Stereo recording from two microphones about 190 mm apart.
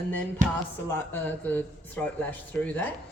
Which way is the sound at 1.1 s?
10° left (ahead or behind).